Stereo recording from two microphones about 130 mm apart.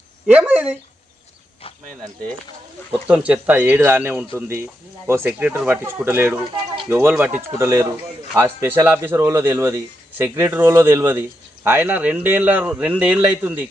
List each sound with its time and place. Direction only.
0.3 s speech: 10° right (ahead or behind)
3.1 s speech: 10° right (ahead or behind)